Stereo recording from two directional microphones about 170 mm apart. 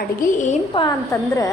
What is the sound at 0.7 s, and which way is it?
Speech, 30° left (ahead or behind).